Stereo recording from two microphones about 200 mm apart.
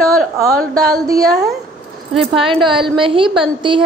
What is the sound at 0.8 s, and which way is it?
A woman's voice, 15° right (ahead or behind).